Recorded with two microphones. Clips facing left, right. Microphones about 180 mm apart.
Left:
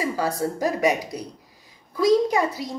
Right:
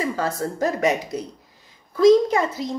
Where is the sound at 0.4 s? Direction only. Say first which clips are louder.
Even; 15° left (ahead or behind).